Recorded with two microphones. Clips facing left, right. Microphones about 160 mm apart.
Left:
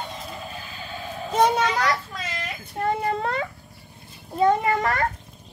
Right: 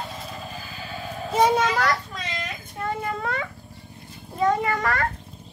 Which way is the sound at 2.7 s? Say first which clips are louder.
Left 5 dB; 35° left (ahead or behind).